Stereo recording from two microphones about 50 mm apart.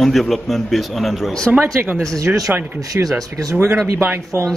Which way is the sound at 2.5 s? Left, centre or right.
Right.